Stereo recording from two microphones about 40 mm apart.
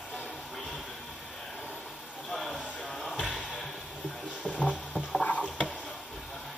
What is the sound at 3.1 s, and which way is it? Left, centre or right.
Music, left.